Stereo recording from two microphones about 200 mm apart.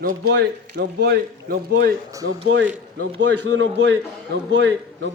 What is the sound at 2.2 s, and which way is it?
A man's voice, 70° right (ahead or behind).